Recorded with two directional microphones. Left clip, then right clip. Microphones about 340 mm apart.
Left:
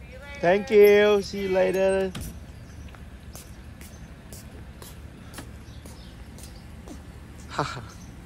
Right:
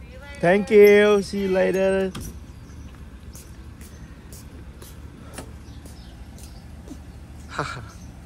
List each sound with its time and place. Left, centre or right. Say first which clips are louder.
0.4 s speech: right 3 dB; centre
7.5 s speech: even; centre